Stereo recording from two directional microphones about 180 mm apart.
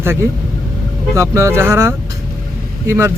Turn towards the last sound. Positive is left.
turn(degrees=-15)  # may be behind; listen again after turning